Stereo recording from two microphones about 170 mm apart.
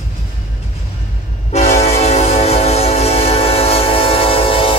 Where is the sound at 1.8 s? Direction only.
40° left (ahead or behind).